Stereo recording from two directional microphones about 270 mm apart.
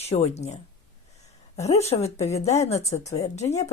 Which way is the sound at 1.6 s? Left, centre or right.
Left.